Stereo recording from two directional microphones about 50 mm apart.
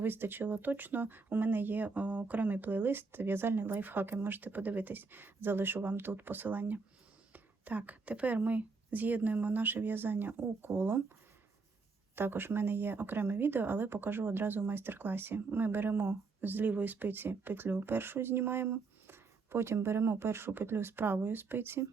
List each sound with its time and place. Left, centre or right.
0.0 s speech: right
12.1 s speech: right
16.0 s speech: right